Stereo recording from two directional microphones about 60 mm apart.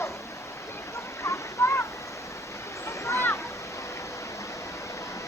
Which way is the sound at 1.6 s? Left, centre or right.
Left.